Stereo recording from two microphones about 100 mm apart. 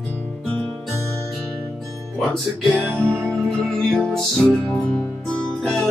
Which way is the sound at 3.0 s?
25° right (ahead or behind).